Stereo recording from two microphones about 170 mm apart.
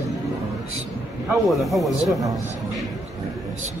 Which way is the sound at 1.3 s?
Centre (ahead or behind).